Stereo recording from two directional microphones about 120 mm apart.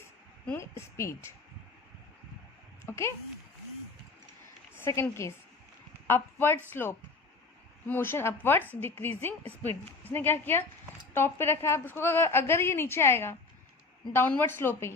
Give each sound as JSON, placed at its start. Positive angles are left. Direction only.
{"t": 0.4, "sound": "a woman's voice", "side_deg": 20}
{"t": 2.8, "sound": "speech", "side_deg": 20}
{"t": 4.9, "sound": "a woman's voice", "side_deg": 25}
{"t": 7.9, "sound": "a woman's voice", "side_deg": 20}